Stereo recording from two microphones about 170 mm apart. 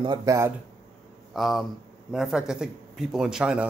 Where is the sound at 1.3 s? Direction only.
Centre (ahead or behind).